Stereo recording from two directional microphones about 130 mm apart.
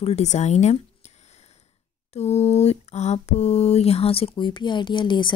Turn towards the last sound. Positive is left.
turn(degrees=40)  # may be behind; listen again after turning